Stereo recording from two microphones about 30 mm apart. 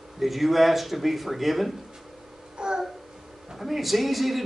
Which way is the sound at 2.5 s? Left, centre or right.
Right.